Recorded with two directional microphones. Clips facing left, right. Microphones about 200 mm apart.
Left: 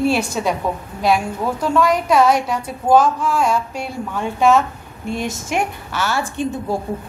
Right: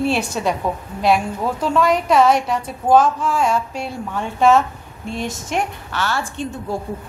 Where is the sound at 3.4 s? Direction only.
5° left (ahead or behind).